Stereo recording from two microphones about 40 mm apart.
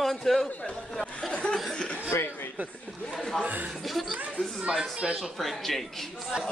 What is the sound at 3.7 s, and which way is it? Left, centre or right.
Speech, centre.